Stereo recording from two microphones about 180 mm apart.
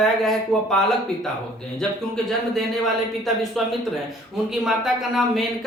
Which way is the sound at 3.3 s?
Centre (ahead or behind).